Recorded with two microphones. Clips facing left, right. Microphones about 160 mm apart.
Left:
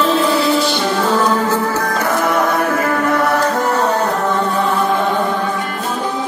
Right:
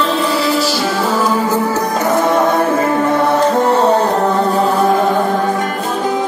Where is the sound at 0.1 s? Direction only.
Centre (ahead or behind); by 4.9 s 35° right (ahead or behind).